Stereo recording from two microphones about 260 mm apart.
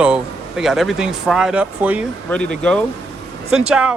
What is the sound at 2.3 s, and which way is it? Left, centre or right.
Speech, centre.